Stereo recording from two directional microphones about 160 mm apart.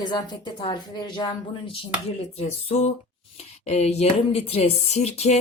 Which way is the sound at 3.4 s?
45° left (ahead or behind).